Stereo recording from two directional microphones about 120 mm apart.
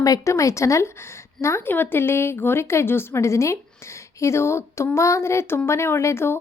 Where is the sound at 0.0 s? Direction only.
30° left (ahead or behind).